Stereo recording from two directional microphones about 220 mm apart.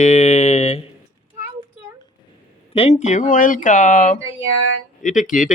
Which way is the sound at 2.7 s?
30° left (ahead or behind).